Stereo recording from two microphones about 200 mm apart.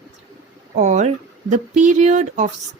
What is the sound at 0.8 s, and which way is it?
Speech, 35° right (ahead or behind).